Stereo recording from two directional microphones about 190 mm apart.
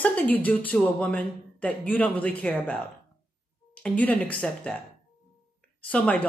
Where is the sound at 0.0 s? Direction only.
10° left (ahead or behind).